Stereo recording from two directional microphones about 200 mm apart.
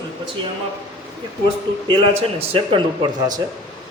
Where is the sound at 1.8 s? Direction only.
30° right (ahead or behind).